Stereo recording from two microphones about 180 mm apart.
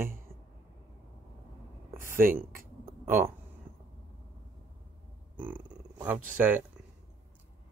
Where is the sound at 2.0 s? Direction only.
50° right (ahead or behind).